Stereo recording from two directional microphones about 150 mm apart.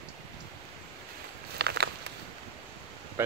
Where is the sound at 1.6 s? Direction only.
90° right.